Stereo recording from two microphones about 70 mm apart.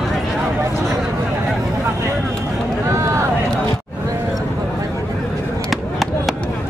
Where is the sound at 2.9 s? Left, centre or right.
Right.